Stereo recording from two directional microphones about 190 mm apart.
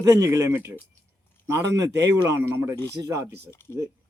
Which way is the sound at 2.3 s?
15° right (ahead or behind).